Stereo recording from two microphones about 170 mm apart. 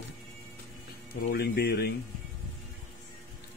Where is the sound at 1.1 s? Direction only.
70° left (ahead or behind).